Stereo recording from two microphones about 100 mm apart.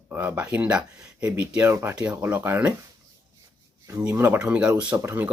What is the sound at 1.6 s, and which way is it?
Speech, 25° right (ahead or behind).